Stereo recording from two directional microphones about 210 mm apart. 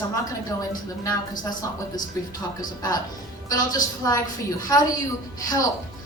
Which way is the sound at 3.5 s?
15° left (ahead or behind).